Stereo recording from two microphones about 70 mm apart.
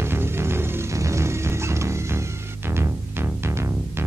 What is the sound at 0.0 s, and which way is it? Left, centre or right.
Music, right.